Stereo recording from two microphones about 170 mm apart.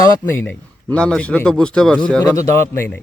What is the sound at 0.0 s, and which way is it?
A man's voice, 10° left (ahead or behind).